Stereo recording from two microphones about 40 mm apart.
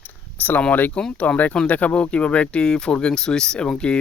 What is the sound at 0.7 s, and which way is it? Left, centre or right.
Speech, left.